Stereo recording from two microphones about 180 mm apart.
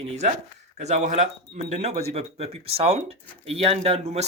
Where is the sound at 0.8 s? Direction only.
40° right (ahead or behind).